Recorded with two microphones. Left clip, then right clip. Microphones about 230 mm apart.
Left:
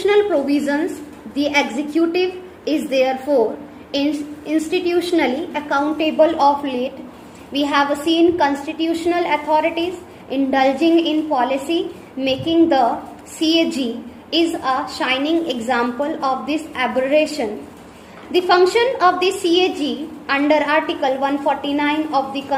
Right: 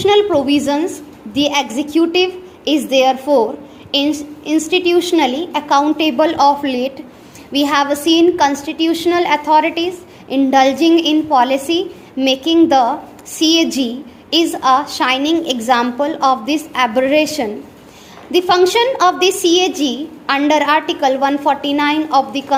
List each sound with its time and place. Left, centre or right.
0.0 s a woman's voice: right